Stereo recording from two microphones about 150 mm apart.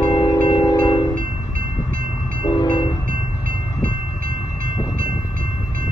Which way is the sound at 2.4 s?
30° left (ahead or behind).